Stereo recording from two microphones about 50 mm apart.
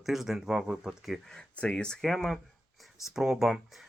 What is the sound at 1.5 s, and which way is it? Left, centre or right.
Speech, left.